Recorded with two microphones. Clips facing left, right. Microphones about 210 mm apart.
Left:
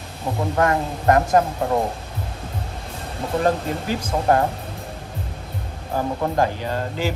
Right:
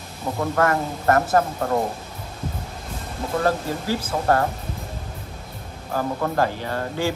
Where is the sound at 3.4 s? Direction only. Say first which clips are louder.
Left 2 dB; 20° left (ahead or behind).